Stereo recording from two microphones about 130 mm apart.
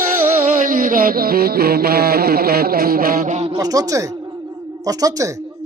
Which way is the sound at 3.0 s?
90° right.